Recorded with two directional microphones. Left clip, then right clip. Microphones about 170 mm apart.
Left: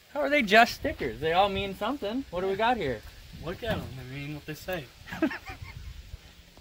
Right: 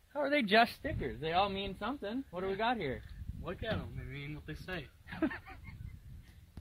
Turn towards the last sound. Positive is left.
turn(degrees=-20)  # may be behind; listen again after turning